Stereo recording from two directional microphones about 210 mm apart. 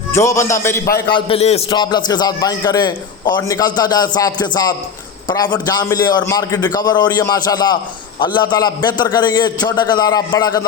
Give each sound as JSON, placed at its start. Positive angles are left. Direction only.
{"t": 0.1, "sound": "a man's voice", "side_deg": 15}
{"t": 1.1, "sound": "a man's voice", "side_deg": 30}